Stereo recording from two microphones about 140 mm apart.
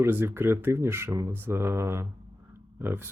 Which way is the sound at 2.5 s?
15° right (ahead or behind).